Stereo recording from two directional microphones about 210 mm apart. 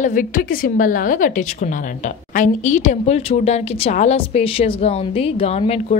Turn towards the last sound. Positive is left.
turn(degrees=30)  # may be behind; listen again after turning